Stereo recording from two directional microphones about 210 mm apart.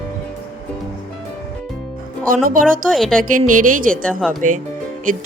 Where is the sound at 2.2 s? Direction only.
40° right (ahead or behind).